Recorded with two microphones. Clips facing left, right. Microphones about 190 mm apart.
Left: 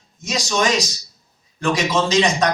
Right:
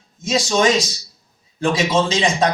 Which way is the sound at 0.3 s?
25° right (ahead or behind).